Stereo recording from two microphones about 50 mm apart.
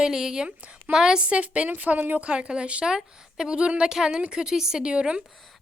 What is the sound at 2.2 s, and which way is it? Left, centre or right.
A woman's voice, right.